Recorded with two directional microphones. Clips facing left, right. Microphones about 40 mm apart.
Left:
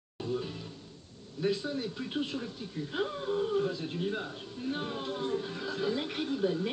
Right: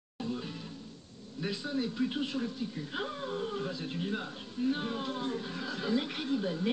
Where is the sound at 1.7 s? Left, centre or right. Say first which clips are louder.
Right 3 dB; centre.